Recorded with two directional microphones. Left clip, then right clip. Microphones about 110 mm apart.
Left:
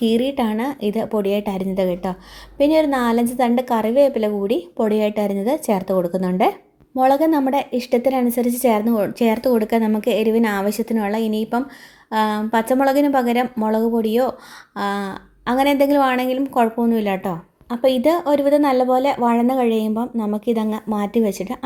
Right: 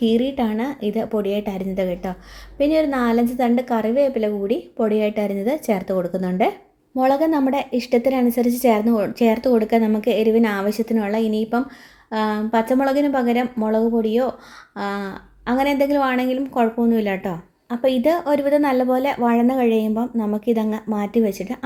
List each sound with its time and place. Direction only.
0.0 s a woman's voice: 30° left (ahead or behind)